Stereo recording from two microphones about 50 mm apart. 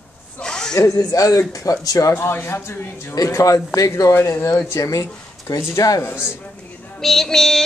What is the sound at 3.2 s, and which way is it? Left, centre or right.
Speech, left.